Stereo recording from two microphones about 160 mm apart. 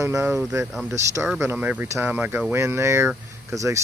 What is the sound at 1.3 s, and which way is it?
Speech, 10° right (ahead or behind).